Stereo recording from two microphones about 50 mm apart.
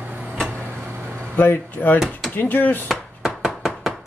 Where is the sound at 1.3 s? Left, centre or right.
Left.